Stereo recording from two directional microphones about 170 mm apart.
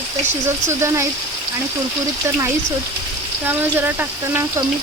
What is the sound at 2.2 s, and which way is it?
Speech, 15° right (ahead or behind).